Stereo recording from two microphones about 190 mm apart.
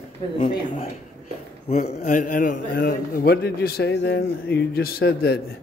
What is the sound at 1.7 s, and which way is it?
A man's voice, 40° left (ahead or behind).